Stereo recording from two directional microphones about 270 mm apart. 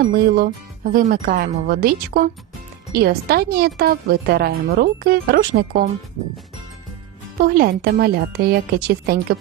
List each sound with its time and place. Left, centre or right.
0.0 s speech: right
7.4 s speech: right